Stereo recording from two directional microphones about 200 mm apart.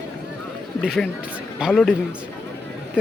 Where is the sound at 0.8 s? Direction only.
Centre (ahead or behind).